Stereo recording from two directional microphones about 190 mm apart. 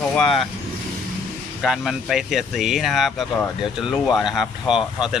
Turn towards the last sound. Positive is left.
turn(degrees=-5)  # may be behind; listen again after turning